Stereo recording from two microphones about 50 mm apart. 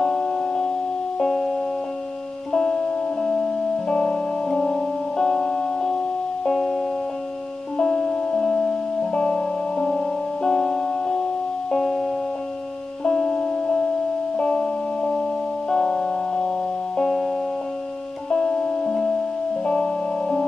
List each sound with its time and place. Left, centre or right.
0.0 s music: centre
2.5 s music: centre